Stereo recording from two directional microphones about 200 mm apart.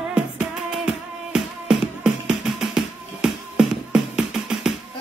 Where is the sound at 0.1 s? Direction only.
5° right (ahead or behind).